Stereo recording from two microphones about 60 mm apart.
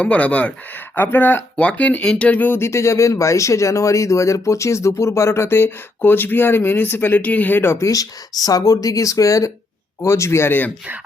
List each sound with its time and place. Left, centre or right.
0.0 s speech: left
0.9 s speech: left
1.5 s speech: left
2.5 s speech: left
7.9 s speech: left
10.0 s speech: left